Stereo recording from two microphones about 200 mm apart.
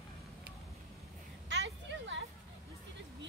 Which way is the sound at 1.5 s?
65° right (ahead or behind).